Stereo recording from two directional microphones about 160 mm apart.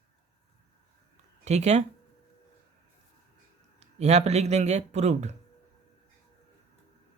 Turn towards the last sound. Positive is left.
turn(degrees=-45)  # may be behind; listen again after turning